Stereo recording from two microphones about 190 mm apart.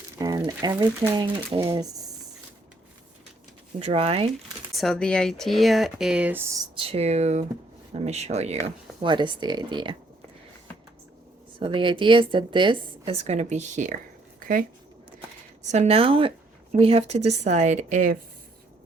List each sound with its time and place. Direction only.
0.2 s a woman's voice: 20° right (ahead or behind)
3.8 s a woman's voice: 30° right (ahead or behind)
4.7 s speech: centre (ahead or behind); by 6.7 s 15° right (ahead or behind)
6.7 s a woman's voice: 30° right (ahead or behind)
11.6 s a woman's voice: 25° right (ahead or behind); by 14.6 s 45° right (ahead or behind)
15.6 s a woman's voice: 35° right (ahead or behind)